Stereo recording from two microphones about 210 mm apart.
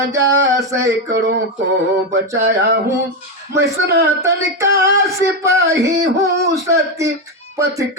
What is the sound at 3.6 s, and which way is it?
Speech, 50° right (ahead or behind).